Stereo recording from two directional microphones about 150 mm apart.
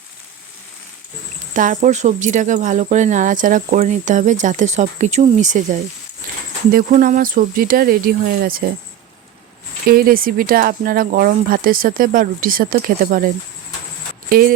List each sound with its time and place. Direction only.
1.5 s speech: 60° right (ahead or behind)
6.7 s speech: 65° right (ahead or behind)
9.8 s speech: 80° right